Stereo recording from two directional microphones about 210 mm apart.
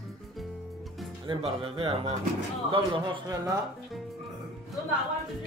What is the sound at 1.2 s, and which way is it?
Speech, 25° right (ahead or behind).